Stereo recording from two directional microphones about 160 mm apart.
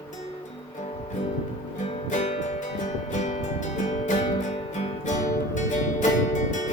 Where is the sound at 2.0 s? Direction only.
45° left (ahead or behind).